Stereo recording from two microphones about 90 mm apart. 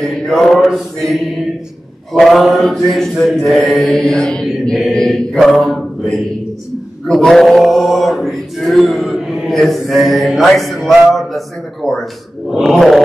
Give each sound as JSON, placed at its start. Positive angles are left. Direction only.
{"t": 0.0, "sound": "mantra", "side_deg": 5}
{"t": 7.1, "sound": "male singing", "side_deg": 5}